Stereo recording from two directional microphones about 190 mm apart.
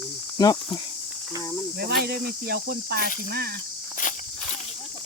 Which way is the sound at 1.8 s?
55° right (ahead or behind).